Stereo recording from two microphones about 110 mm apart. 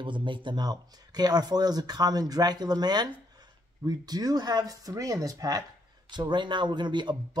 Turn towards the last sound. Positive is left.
turn(degrees=-45)  # may be behind; listen again after turning